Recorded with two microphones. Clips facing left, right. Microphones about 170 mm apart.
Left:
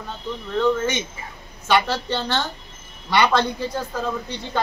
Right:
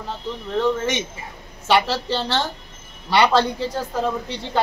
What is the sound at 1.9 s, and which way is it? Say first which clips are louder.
A woman's voice: right 1 dB; 30° right (ahead or behind).